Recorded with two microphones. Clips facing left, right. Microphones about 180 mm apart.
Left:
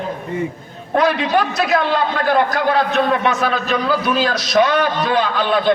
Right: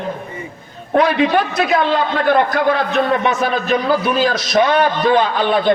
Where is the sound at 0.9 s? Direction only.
55° right (ahead or behind).